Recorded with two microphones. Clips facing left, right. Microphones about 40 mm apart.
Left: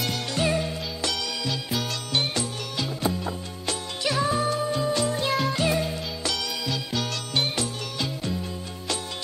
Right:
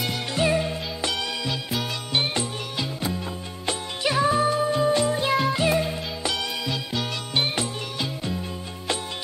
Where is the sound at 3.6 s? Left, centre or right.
Centre.